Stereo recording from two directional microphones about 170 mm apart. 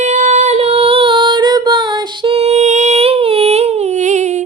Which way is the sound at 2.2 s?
35° right (ahead or behind).